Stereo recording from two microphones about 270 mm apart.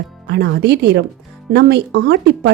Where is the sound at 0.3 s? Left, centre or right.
Right.